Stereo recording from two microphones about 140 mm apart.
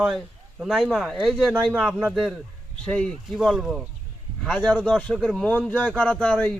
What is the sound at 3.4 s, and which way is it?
A man's voice, 5° right (ahead or behind).